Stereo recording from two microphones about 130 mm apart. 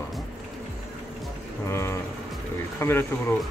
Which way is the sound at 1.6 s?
20° left (ahead or behind).